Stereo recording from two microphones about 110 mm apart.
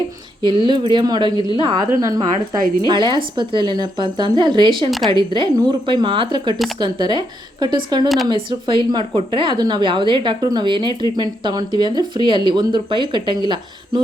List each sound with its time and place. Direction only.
0.4 s a woman's voice: 45° right (ahead or behind)
1.9 s a woman's voice: 30° right (ahead or behind); by 4.9 s 50° right (ahead or behind)
4.9 s a woman's voice: centre (ahead or behind)
5.1 s a woman's voice: 45° right (ahead or behind)